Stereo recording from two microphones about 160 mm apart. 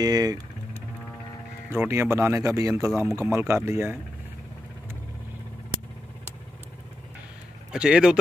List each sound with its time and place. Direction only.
0.0 s speech: 25° right (ahead or behind)
1.7 s speech: 15° right (ahead or behind)
7.7 s speech: 5° right (ahead or behind)